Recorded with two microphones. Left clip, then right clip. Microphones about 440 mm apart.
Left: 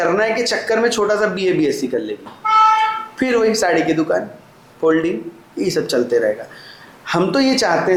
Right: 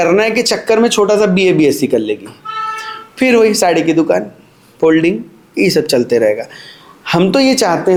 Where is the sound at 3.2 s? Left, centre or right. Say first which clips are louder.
Right 6 dB; right.